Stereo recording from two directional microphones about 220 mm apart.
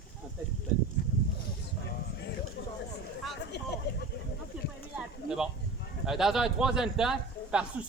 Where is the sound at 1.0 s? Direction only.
35° left (ahead or behind).